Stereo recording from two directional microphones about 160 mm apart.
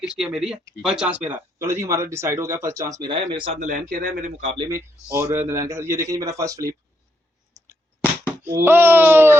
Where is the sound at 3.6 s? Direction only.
60° right (ahead or behind).